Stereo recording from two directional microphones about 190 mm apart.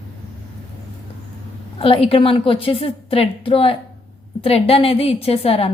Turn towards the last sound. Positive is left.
turn(degrees=30)  # may be behind; listen again after turning